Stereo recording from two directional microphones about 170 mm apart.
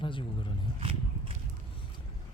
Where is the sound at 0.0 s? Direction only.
30° left (ahead or behind).